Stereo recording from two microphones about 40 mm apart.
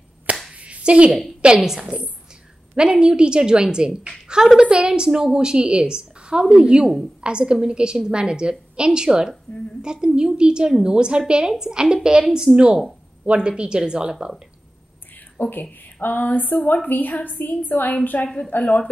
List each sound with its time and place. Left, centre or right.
0.6 s clapping: right
1.4 s a woman's voice: right
13.2 s a woman's voice: right
15.4 s a woman's voice: left
18.6 s a woman's voice: left